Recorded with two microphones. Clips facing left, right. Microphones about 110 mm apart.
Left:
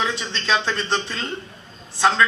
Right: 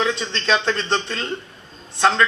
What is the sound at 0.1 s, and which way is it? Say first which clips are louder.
Speech: right 3 dB; 25° right (ahead or behind).